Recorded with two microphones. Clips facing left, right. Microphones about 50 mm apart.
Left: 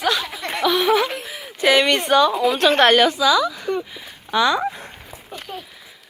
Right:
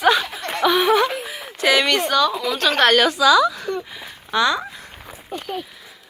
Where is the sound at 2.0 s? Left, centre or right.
Left.